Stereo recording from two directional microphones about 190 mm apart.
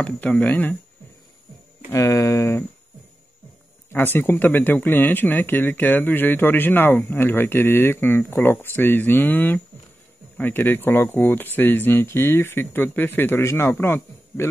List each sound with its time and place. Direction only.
0.0 s speech: 5° left (ahead or behind)
1.9 s speech: 15° left (ahead or behind)
3.9 s speech: 10° left (ahead or behind)